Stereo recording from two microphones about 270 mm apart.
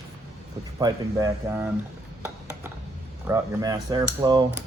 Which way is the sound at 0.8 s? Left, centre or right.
Centre.